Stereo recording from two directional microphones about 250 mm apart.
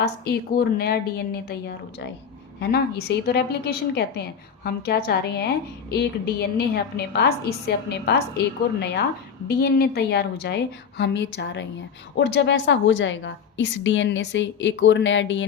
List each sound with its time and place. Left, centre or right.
0.0 s a woman's voice: left